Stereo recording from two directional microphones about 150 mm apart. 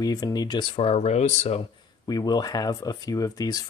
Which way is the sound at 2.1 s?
25° left (ahead or behind).